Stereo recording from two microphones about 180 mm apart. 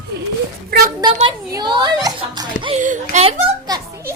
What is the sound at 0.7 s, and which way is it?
Speech, 55° right (ahead or behind).